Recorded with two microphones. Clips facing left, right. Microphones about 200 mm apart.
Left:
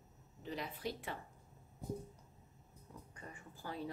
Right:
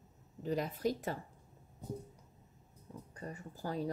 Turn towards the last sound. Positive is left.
turn(degrees=-40)  # may be behind; listen again after turning